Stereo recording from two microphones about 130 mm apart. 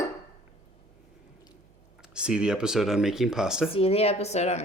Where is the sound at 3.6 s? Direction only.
45° left (ahead or behind).